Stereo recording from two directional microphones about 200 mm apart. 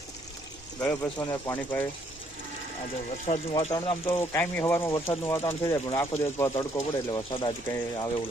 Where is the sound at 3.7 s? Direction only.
15° left (ahead or behind).